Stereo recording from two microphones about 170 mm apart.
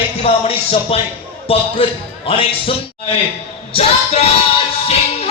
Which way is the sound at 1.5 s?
35° left (ahead or behind).